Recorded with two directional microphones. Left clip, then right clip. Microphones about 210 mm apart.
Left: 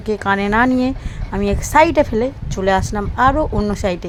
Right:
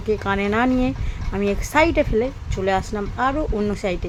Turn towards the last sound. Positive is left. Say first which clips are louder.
# left 4 dB
turn(degrees=10)  # may be behind; listen again after turning